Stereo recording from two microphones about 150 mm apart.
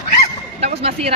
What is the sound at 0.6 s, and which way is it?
Speech, 45° right (ahead or behind).